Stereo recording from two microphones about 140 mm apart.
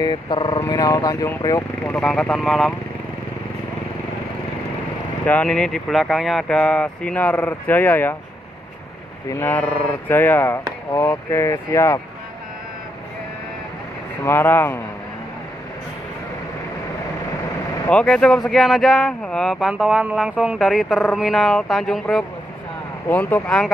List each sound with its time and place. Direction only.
0.0 s speech: 30° left (ahead or behind)
2.0 s speech: 5° left (ahead or behind)
5.2 s speech: 10° left (ahead or behind)
9.3 s speech: 15° left (ahead or behind)
14.2 s speech: 15° left (ahead or behind)
17.8 s speech: 10° left (ahead or behind)
19.7 s speech: 10° right (ahead or behind)